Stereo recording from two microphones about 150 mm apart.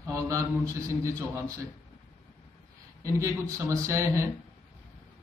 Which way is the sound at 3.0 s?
20° right (ahead or behind).